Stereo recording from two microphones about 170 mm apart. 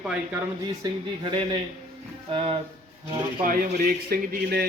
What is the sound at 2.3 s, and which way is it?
Speech, 30° right (ahead or behind).